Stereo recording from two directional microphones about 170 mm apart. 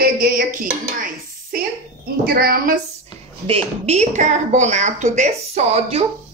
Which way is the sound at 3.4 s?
35° right (ahead or behind).